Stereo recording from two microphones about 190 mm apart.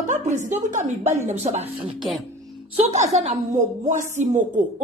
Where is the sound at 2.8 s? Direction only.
35° right (ahead or behind).